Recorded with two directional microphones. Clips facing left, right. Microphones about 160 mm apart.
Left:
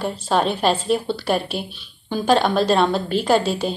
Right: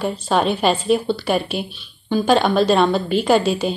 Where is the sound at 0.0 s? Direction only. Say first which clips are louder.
Right 1 dB; centre (ahead or behind).